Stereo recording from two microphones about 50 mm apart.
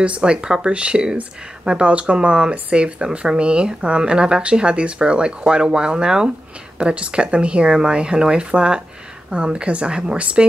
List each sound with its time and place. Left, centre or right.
0.0 s speech: right